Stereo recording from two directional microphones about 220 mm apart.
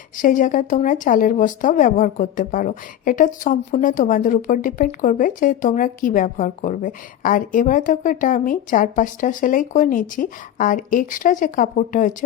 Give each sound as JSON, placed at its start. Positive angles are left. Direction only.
{"t": 0.2, "sound": "speech", "side_deg": 35}